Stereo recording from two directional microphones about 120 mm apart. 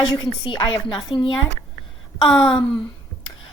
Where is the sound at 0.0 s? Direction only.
40° left (ahead or behind).